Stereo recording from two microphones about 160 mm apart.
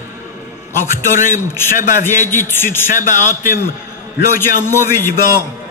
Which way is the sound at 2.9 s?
50° left (ahead or behind).